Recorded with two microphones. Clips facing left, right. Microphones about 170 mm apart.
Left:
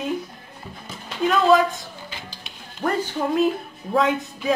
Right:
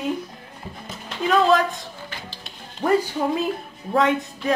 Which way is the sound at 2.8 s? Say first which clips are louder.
Right 5 dB; 10° right (ahead or behind).